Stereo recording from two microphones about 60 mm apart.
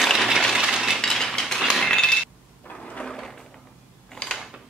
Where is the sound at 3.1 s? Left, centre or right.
Centre.